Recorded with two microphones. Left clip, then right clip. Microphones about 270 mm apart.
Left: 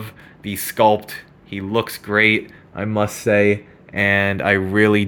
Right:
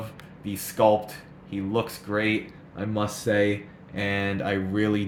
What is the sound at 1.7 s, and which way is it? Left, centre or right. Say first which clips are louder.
Speech: left 9 dB; left.